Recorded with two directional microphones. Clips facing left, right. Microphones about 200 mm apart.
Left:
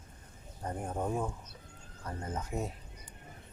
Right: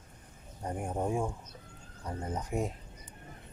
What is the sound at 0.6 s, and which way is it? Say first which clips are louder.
Speech: right 2 dB; 10° right (ahead or behind).